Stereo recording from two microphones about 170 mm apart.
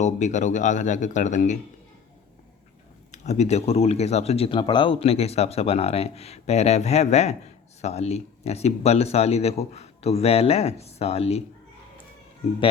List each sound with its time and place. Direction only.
0.0 s speech: 45° left (ahead or behind)
3.1 s speech: 40° left (ahead or behind)